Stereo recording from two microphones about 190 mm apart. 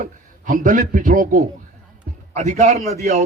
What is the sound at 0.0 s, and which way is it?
Speech, 45° right (ahead or behind).